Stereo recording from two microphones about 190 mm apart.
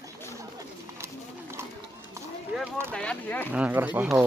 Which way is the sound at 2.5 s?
5° right (ahead or behind).